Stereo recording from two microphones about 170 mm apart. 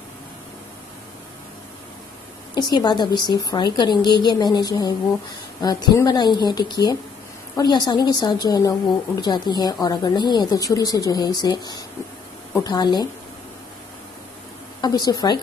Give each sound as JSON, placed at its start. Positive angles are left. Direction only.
{"t": 2.5, "sound": "a woman's voice", "side_deg": 25}
{"t": 14.8, "sound": "a woman's voice", "side_deg": 25}